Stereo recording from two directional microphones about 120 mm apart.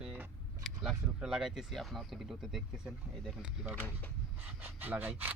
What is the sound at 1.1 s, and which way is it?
Speech, 5° right (ahead or behind).